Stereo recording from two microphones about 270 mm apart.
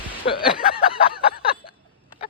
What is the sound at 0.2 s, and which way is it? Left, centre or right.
Speech, left.